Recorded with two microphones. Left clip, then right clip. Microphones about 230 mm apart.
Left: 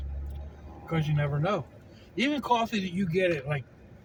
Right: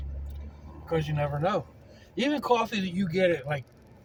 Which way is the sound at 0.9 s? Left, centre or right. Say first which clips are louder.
Right 3 dB; right.